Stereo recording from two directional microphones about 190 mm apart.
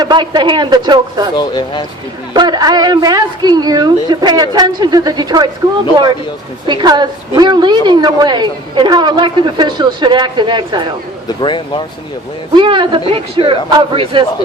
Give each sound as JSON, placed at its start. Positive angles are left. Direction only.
{"t": 0.0, "sound": "a woman's voice", "side_deg": -25}
{"t": 1.4, "sound": "speech", "side_deg": 25}
{"t": 2.3, "sound": "a woman's voice", "side_deg": -20}
{"t": 11.3, "sound": "speech", "side_deg": 25}
{"t": 12.5, "sound": "a woman's voice", "side_deg": -25}